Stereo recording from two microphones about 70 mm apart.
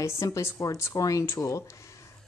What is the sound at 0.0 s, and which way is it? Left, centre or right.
A woman's voice, left.